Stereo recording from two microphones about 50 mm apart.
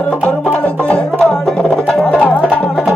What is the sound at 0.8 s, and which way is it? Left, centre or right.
Music, centre.